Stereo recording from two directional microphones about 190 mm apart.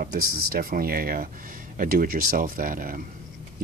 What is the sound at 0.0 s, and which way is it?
Speech, 50° right (ahead or behind).